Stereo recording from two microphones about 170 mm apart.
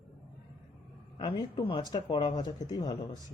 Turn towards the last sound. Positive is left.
turn(degrees=25)  # may be behind; listen again after turning